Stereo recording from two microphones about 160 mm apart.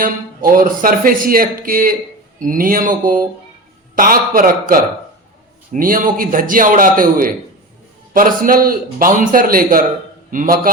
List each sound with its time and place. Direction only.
0.5 s a man's voice: 60° right (ahead or behind)